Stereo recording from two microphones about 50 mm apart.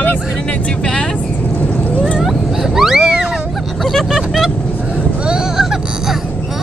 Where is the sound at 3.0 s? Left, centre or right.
Centre.